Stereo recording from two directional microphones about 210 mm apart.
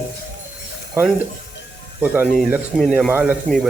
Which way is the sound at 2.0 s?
5° right (ahead or behind).